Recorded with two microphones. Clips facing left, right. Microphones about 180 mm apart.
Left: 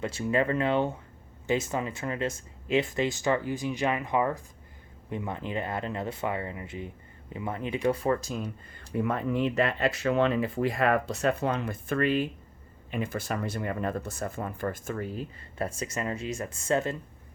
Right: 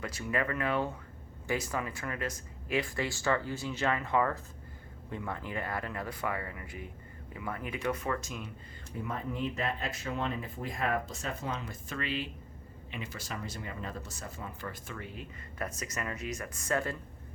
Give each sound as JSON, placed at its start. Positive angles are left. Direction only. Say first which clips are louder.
{"t": 0.0, "sound": "speech", "louder": "left 6 dB", "side_deg": 25}
{"t": 8.9, "sound": "speech", "louder": "left 9 dB", "side_deg": 70}